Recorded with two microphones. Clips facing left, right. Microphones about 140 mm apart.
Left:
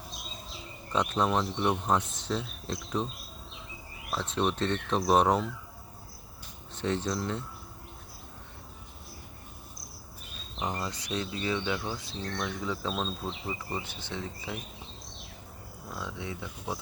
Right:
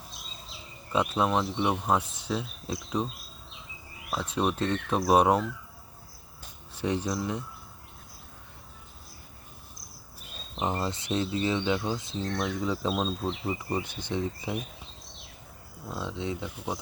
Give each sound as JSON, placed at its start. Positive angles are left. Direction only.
{"t": 0.9, "sound": "speech", "side_deg": -5}
{"t": 4.1, "sound": "speech", "side_deg": -5}
{"t": 6.7, "sound": "speech", "side_deg": -10}
{"t": 10.6, "sound": "speech", "side_deg": -25}
{"t": 15.9, "sound": "speech", "side_deg": -20}